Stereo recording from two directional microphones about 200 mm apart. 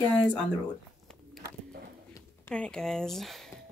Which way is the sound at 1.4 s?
50° right (ahead or behind).